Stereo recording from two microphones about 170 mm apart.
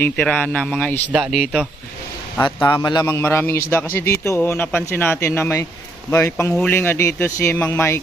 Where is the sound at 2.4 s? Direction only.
25° left (ahead or behind).